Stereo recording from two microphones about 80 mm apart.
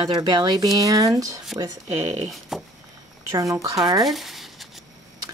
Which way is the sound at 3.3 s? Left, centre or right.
Right.